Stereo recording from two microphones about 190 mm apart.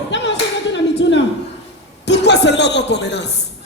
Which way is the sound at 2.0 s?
65° left (ahead or behind).